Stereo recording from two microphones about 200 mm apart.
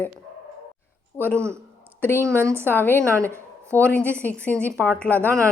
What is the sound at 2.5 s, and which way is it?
Speech, 10° left (ahead or behind).